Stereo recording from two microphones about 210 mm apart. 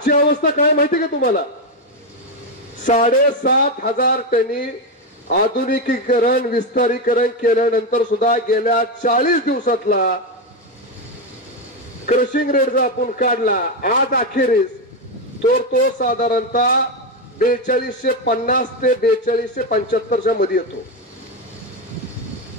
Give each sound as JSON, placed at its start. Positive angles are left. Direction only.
{"t": 0.0, "sound": "speech", "side_deg": 40}
{"t": 2.8, "sound": "a man's voice", "side_deg": 35}
{"t": 5.7, "sound": "a man's voice", "side_deg": 40}
{"t": 12.1, "sound": "a man's voice", "side_deg": 40}
{"t": 15.7, "sound": "a man's voice", "side_deg": 40}